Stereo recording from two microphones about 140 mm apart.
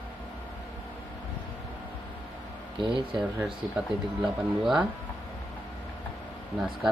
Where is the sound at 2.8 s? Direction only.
35° right (ahead or behind).